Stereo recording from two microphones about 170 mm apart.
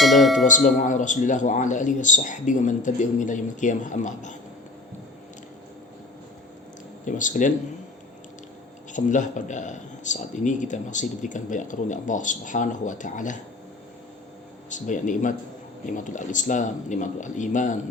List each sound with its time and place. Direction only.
0.0 s tubular bells: centre (ahead or behind)
0.4 s a man's voice: 50° left (ahead or behind)
7.0 s a man's voice: 50° left (ahead or behind)
8.9 s a man's voice: 45° left (ahead or behind)
14.7 s a man's voice: 50° left (ahead or behind)